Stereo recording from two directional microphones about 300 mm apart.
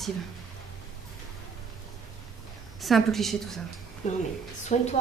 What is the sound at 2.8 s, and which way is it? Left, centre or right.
Speech, centre.